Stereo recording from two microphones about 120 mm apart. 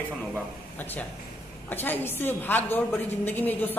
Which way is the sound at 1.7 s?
15° left (ahead or behind).